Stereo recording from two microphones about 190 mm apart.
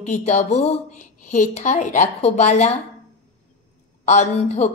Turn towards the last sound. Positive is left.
turn(degrees=35)  # may be behind; listen again after turning